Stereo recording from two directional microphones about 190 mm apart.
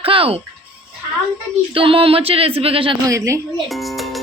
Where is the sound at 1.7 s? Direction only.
30° right (ahead or behind).